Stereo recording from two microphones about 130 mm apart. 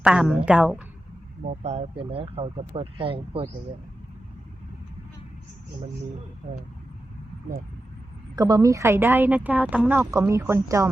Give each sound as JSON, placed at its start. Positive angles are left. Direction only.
{"t": 0.0, "sound": "a woman's voice", "side_deg": -5}
{"t": 1.5, "sound": "speech", "side_deg": -55}
{"t": 8.4, "sound": "speech", "side_deg": -30}